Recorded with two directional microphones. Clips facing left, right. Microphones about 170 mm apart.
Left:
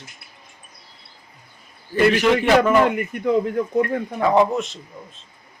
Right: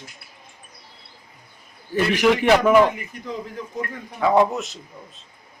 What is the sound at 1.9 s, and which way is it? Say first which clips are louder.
Speech: left 2 dB; 10° right (ahead or behind).